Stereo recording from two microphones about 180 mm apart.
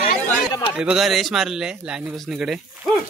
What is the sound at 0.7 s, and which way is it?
Speech, 5° right (ahead or behind).